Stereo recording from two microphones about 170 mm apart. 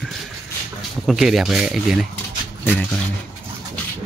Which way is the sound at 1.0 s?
Centre (ahead or behind).